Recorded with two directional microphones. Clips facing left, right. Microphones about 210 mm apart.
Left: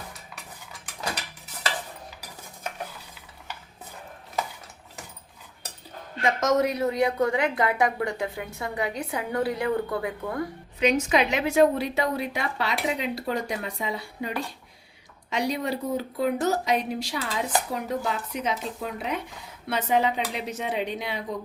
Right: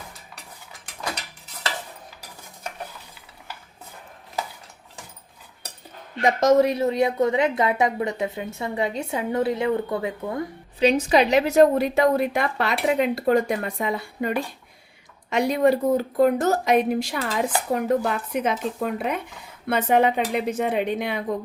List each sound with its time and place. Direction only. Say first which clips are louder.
6.2 s a woman's voice: right 5 dB; 30° right (ahead or behind); by 21.2 s 55° right (ahead or behind)